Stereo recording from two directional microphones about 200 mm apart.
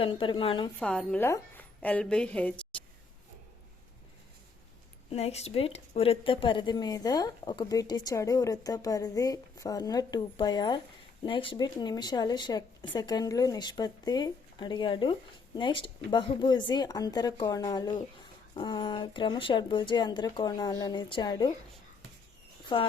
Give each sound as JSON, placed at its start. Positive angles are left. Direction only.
{"t": 0.0, "sound": "a woman's voice", "side_deg": 25}
{"t": 0.8, "sound": "a woman's voice", "side_deg": 5}
{"t": 5.0, "sound": "a woman's voice", "side_deg": 30}
{"t": 22.7, "sound": "a woman's voice", "side_deg": 25}